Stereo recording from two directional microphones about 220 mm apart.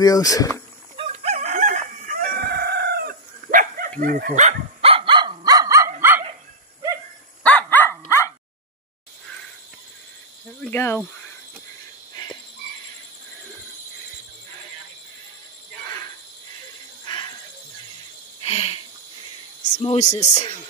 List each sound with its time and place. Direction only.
0.0 s speech: 15° left (ahead or behind)
0.9 s crowing: 25° right (ahead or behind)
4.0 s dog: 40° right (ahead or behind); by 6.2 s 10° right (ahead or behind)
7.4 s dog: 10° left (ahead or behind)
10.6 s speech: 10° left (ahead or behind)
17.0 s a sound: 20° left (ahead or behind)
18.4 s a sound: 25° left (ahead or behind)
19.8 s speech: 30° left (ahead or behind)